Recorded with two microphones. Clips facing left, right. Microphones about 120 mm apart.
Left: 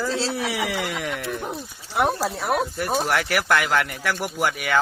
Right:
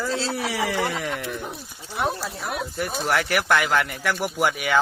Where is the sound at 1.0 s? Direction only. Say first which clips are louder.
Even; centre (ahead or behind).